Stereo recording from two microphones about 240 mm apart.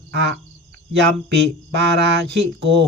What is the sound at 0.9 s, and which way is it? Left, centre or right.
Speech, right.